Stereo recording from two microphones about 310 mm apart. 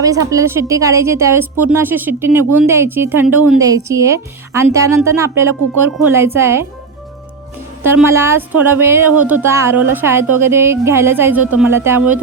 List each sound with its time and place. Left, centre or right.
0.0 s a woman's voice: centre
7.9 s a woman's voice: centre